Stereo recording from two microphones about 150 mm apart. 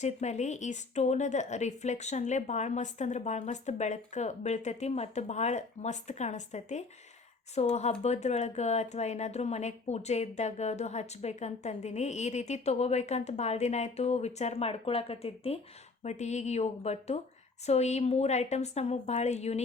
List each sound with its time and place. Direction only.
0.0 s speech: 50° left (ahead or behind)